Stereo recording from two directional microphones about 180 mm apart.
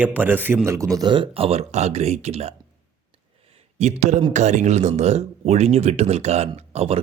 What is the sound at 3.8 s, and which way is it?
Speech, 40° right (ahead or behind).